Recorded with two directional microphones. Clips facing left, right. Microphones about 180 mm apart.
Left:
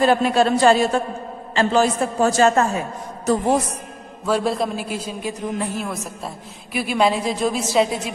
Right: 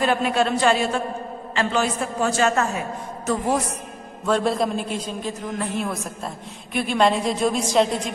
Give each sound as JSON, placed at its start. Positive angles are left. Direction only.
{"t": 0.0, "sound": "a man's voice", "side_deg": 35}
{"t": 4.3, "sound": "a man's voice", "side_deg": 5}